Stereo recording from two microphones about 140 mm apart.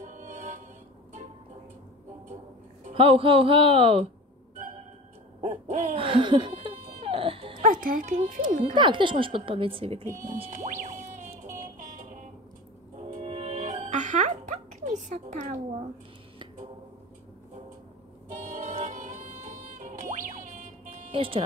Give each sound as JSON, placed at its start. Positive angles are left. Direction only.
{"t": 0.0, "sound": "music", "side_deg": -65}
{"t": 2.9, "sound": "a woman's voice", "side_deg": -40}
{"t": 5.4, "sound": "hoot", "side_deg": -60}
{"t": 5.9, "sound": "a woman's voice", "side_deg": -40}
{"t": 7.0, "sound": "baby cry", "side_deg": -40}
{"t": 7.6, "sound": "speech", "side_deg": -75}
{"t": 8.1, "sound": "speech", "side_deg": -55}
{"t": 8.5, "sound": "speech", "side_deg": -70}
{"t": 8.7, "sound": "a woman's voice", "side_deg": -35}
{"t": 10.4, "sound": "music", "side_deg": -60}
{"t": 11.8, "sound": "vehicle", "side_deg": -65}
{"t": 13.2, "sound": "music", "side_deg": -40}
{"t": 13.8, "sound": "music", "side_deg": -60}
{"t": 18.3, "sound": "music", "side_deg": -60}